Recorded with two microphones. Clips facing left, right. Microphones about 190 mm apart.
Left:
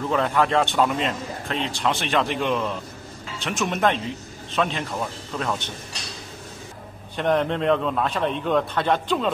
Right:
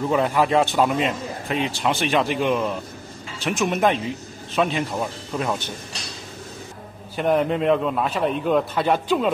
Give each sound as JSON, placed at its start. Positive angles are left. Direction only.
{"t": 0.0, "sound": "a man's voice", "side_deg": -10}
{"t": 7.2, "sound": "a man's voice", "side_deg": -5}